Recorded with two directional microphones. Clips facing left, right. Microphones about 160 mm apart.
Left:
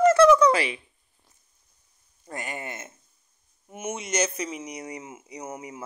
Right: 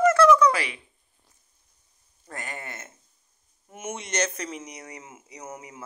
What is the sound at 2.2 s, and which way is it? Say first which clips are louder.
Speech: left 3 dB; 15° left (ahead or behind).